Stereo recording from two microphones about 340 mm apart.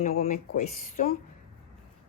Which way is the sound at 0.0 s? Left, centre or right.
Left.